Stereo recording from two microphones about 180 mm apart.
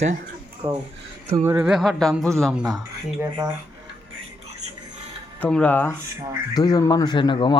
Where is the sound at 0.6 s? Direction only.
30° right (ahead or behind).